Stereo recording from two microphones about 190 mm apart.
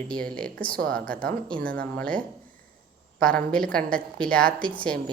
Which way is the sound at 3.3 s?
5° left (ahead or behind).